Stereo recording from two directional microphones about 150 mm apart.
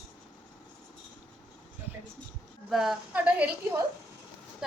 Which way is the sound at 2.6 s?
Centre (ahead or behind).